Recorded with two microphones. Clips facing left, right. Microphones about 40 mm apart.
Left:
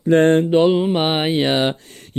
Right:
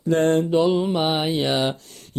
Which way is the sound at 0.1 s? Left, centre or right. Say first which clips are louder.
Left 5 dB; left.